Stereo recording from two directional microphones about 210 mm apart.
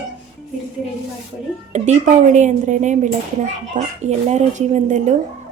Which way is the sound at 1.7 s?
35° right (ahead or behind).